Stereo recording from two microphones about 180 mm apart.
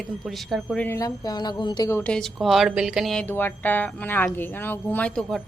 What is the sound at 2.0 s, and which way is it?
Speech, 5° left (ahead or behind).